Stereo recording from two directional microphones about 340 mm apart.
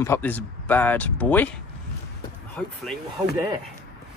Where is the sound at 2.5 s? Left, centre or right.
Centre.